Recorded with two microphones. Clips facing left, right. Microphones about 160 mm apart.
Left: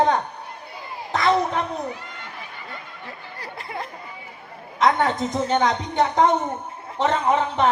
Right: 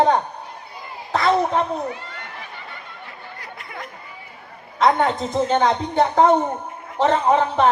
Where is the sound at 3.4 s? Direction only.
30° left (ahead or behind).